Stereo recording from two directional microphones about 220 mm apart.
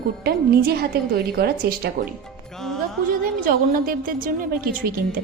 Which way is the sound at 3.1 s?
40° right (ahead or behind).